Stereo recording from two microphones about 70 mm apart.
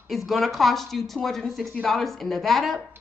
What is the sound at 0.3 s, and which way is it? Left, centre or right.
A woman's voice, centre.